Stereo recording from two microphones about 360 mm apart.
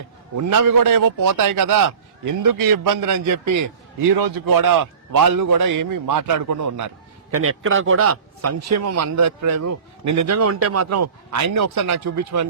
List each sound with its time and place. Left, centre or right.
0.3 s a man's voice: right
4.1 s a man's voice: right
7.3 s a man's voice: right